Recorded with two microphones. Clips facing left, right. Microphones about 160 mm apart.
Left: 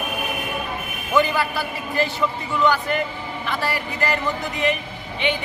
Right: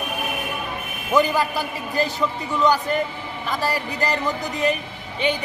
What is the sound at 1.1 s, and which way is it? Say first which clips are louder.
A man's voice: right 1 dB; 40° right (ahead or behind).